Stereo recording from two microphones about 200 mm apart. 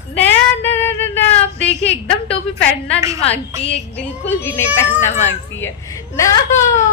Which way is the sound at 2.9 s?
15° right (ahead or behind).